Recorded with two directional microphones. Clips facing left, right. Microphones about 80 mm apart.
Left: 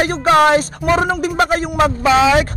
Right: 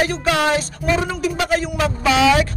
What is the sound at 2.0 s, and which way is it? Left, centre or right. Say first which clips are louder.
Speech: left 1 dB; left.